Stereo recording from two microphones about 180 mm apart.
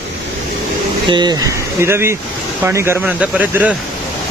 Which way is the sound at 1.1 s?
25° right (ahead or behind).